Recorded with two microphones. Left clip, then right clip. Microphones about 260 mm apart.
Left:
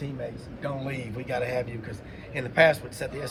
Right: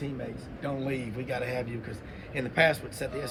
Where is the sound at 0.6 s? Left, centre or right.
Left.